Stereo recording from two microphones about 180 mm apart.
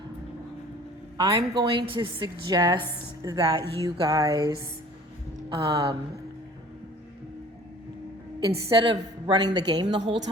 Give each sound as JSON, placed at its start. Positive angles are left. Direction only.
{"t": 1.2, "sound": "a woman's voice", "side_deg": -20}
{"t": 8.4, "sound": "a woman's voice", "side_deg": -30}